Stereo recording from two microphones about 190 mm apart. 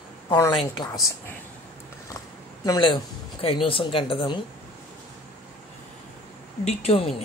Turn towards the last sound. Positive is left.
turn(degrees=30)  # may be behind; listen again after turning